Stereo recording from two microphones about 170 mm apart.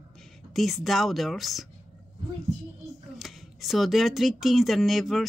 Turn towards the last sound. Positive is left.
turn(degrees=0)  # may be behind; listen again after turning